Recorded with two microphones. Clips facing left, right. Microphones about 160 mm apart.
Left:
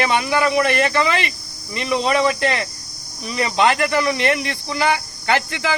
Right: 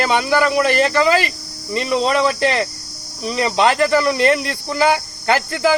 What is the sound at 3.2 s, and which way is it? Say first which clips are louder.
Speech: right 2 dB; 35° right (ahead or behind).